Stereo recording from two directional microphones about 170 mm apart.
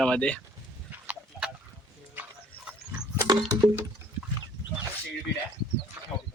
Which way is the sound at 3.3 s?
20° right (ahead or behind).